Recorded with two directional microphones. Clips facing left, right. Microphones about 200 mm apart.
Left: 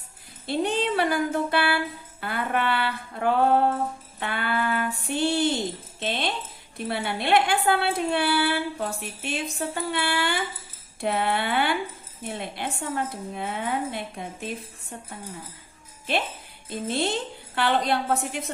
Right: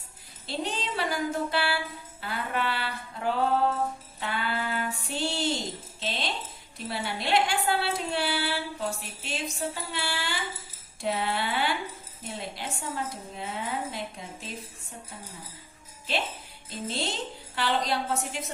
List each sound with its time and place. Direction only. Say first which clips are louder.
0.4 s a woman's voice: left 8 dB; 55° left (ahead or behind)
4.2 s female singing: left 4 dB; 60° left (ahead or behind)
6.0 s a woman's voice: left 5 dB; 55° left (ahead or behind)
16.1 s a woman's voice: left 4 dB; 55° left (ahead or behind)